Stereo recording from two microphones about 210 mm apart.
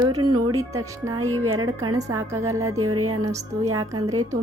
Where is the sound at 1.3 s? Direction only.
90° right.